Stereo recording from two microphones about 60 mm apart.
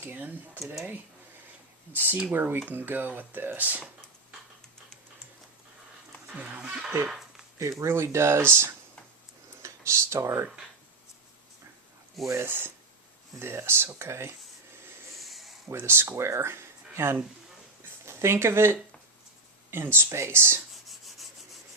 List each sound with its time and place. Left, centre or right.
0.0 s speech: right
1.9 s speech: right
6.3 s speech: right
7.8 s speech: right
12.3 s speech: right
15.2 s a sound: centre
15.7 s speech: right
20.8 s rub: centre